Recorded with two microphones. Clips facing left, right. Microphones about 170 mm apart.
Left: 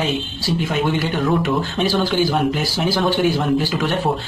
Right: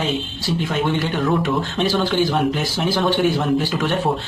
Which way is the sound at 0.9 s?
Centre (ahead or behind).